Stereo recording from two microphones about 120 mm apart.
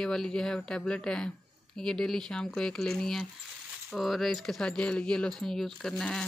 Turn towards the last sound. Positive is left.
turn(degrees=5)  # may be behind; listen again after turning